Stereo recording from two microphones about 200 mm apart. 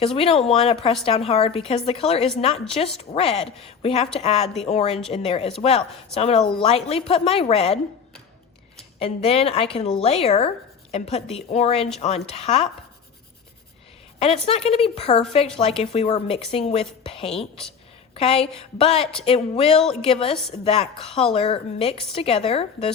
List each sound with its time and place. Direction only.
0.0 s a woman's voice: 30° left (ahead or behind)
9.0 s a woman's voice: 30° left (ahead or behind)
14.2 s a woman's voice: 30° left (ahead or behind)